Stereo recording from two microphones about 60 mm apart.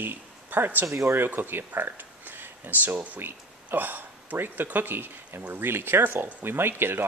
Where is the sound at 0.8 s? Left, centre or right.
Right.